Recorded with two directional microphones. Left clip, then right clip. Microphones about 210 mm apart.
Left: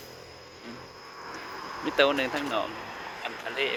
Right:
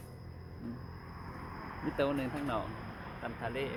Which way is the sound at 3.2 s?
5° left (ahead or behind).